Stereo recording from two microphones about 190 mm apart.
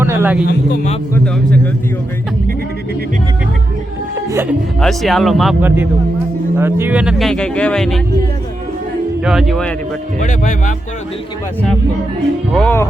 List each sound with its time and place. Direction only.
0.0 s speech: 10° right (ahead or behind)
1.1 s speech: 5° left (ahead or behind)
4.3 s speech: 15° right (ahead or behind)
4.8 s speech: centre (ahead or behind)
9.2 s speech: 5° right (ahead or behind)
10.2 s speech: 45° left (ahead or behind)
12.5 s music: 10° left (ahead or behind)